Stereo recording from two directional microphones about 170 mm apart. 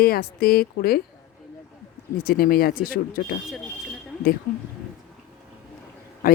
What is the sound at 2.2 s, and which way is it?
Speech, 60° left (ahead or behind).